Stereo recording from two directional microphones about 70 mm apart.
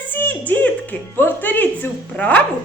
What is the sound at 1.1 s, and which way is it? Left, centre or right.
Music, left.